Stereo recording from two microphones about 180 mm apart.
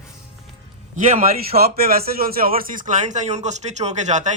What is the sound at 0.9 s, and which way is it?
Speech, 45° right (ahead or behind).